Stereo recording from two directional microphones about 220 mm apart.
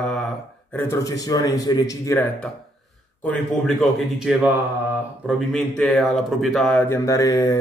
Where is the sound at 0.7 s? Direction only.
10° left (ahead or behind).